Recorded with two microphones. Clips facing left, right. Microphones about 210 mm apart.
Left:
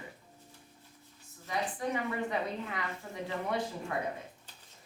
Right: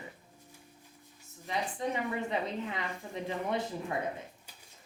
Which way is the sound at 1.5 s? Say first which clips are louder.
Even; 20° right (ahead or behind).